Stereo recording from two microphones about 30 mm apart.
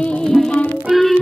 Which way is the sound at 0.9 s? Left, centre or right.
Centre.